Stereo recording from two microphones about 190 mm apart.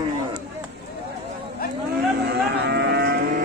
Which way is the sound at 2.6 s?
60° right (ahead or behind).